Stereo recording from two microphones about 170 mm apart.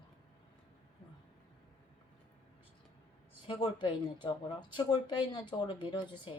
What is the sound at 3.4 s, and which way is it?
Speech, 30° left (ahead or behind).